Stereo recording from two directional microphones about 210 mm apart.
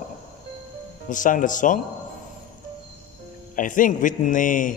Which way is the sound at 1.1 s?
40° left (ahead or behind).